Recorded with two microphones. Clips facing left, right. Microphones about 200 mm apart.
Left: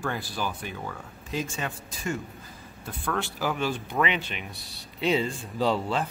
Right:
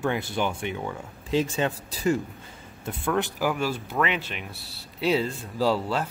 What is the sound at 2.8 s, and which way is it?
Speech, 20° right (ahead or behind).